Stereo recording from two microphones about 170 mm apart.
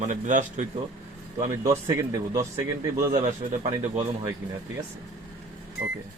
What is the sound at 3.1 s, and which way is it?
Speech, 40° right (ahead or behind).